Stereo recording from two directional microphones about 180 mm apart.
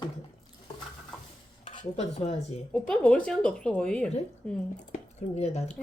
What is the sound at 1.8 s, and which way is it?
Speech, 35° left (ahead or behind).